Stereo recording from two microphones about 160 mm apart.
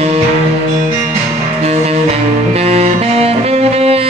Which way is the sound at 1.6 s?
40° right (ahead or behind).